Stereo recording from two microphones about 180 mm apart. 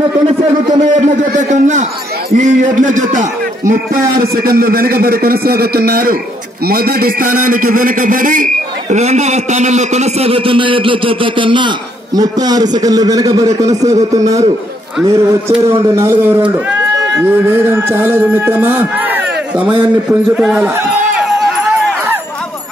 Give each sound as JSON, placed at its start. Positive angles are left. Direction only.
{"t": 1.0, "sound": "a man's voice", "side_deg": -40}
{"t": 21.3, "sound": "run", "side_deg": 0}